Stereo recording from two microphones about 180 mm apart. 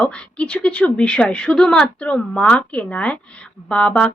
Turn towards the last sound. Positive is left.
turn(degrees=5)  # may be behind; listen again after turning